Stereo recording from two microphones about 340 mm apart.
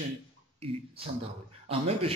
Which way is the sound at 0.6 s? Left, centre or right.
Centre.